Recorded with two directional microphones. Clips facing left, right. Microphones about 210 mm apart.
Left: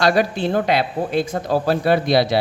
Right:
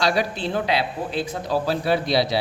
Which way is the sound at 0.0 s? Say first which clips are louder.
Left 5 dB; 50° left (ahead or behind).